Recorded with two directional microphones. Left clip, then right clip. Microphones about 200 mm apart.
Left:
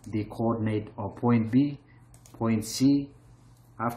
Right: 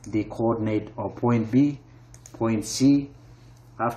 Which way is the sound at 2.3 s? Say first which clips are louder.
Right 4 dB; 15° left (ahead or behind).